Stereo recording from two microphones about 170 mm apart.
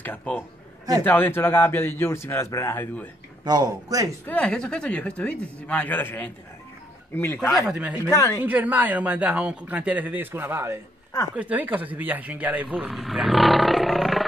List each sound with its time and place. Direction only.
0.0 s a man's voice: 10° left (ahead or behind)
3.4 s speech: 20° right (ahead or behind)
4.3 s a man's voice: 5° left (ahead or behind)
7.5 s speech: 5° right (ahead or behind)
8.1 s a man's voice: 20° left (ahead or behind)
8.4 s speech: 10° right (ahead or behind)
12.9 s roar: centre (ahead or behind)